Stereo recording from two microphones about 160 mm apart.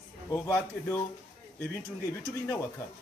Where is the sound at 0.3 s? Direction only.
20° left (ahead or behind).